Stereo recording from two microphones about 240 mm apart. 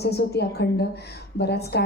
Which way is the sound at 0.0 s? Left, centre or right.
Left.